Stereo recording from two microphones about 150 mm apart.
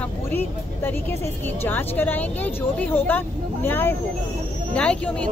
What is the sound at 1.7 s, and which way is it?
Speech, 15° left (ahead or behind).